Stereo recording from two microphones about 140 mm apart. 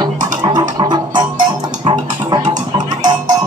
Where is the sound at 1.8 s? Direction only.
30° right (ahead or behind).